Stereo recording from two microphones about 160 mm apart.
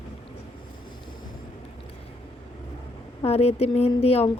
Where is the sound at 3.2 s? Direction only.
40° left (ahead or behind).